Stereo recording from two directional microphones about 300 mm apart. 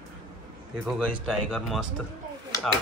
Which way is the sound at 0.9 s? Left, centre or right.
Centre.